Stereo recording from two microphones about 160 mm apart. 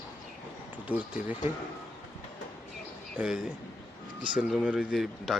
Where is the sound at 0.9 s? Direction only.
10° right (ahead or behind).